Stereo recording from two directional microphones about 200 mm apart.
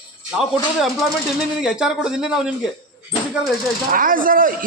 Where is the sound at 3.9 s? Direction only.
45° right (ahead or behind).